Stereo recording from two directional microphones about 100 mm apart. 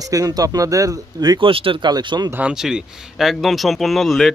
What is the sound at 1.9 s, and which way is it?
Speech, 45° right (ahead or behind).